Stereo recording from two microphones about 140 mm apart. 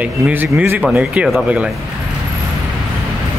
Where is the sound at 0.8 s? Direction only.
5° right (ahead or behind).